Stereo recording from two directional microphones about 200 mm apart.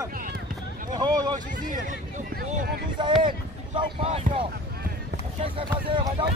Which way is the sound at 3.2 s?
25° right (ahead or behind).